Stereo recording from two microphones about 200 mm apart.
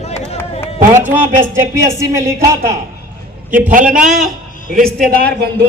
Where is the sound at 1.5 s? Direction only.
15° right (ahead or behind).